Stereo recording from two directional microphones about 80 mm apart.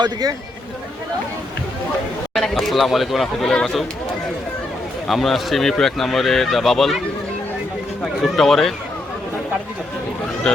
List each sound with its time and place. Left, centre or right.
0.0 s speech: right
2.3 s speech: centre
5.0 s speech: centre
8.0 s speech: centre